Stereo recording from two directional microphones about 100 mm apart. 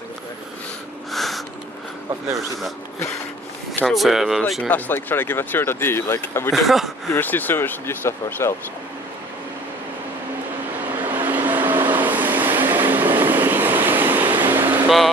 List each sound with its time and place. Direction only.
1.1 s a sound: centre (ahead or behind)
3.8 s speech: centre (ahead or behind)
4.6 s speech: 15° left (ahead or behind)
6.5 s speech: centre (ahead or behind)
7.2 s speech: 20° left (ahead or behind)
11.0 s vehicle: 20° right (ahead or behind)